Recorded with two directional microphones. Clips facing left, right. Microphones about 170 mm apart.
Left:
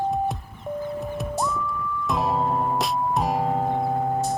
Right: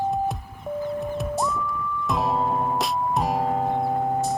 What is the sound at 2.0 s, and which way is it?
Music, centre (ahead or behind).